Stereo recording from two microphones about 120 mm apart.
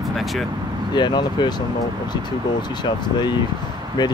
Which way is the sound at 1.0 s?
40° left (ahead or behind).